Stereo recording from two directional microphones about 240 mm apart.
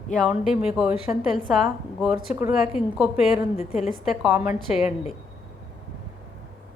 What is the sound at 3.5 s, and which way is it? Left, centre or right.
Speech, left.